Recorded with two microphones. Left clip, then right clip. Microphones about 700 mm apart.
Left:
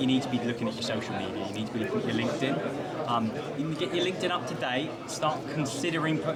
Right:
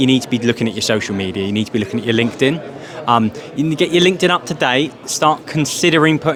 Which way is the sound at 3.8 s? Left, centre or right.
Right.